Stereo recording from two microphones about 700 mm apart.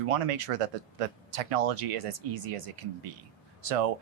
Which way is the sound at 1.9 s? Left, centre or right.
Right.